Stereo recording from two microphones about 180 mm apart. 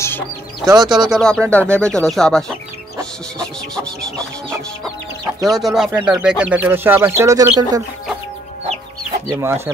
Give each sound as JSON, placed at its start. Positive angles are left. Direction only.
{"t": 0.7, "sound": "speech", "side_deg": -25}
{"t": 1.0, "sound": "speech", "side_deg": 0}
{"t": 3.0, "sound": "music", "side_deg": 5}
{"t": 5.4, "sound": "speech", "side_deg": 0}
{"t": 9.3, "sound": "speech", "side_deg": -15}